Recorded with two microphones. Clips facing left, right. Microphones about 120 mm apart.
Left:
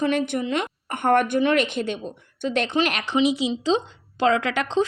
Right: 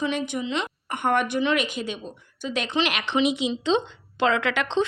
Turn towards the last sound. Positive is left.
turn(degrees=35)  # may be behind; listen again after turning